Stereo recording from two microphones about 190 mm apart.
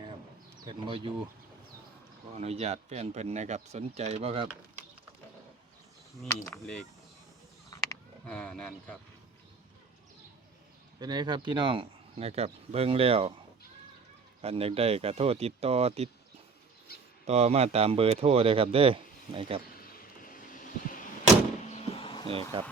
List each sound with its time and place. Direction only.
0.6 s speech: 25° right (ahead or behind)
2.3 s speech: 35° right (ahead or behind)
8.3 s speech: 5° left (ahead or behind)
11.0 s speech: 20° right (ahead or behind)
14.4 s speech: 30° right (ahead or behind)
17.2 s speech: 35° right (ahead or behind)
19.8 s vehicle: 45° left (ahead or behind)
21.7 s vehicle: 30° left (ahead or behind)
22.3 s speech: 30° right (ahead or behind)